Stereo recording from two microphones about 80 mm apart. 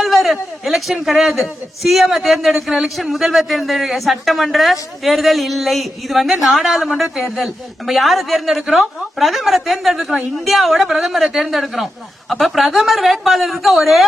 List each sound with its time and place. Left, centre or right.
0.0 s a man's voice: centre